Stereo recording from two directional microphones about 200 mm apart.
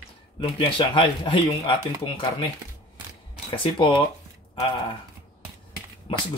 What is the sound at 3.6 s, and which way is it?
Speech, 25° left (ahead or behind).